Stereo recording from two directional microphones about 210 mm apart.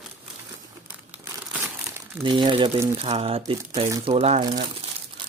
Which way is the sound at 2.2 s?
20° right (ahead or behind).